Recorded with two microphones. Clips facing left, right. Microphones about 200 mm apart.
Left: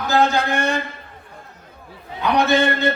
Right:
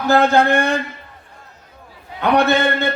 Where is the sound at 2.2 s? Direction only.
60° right (ahead or behind).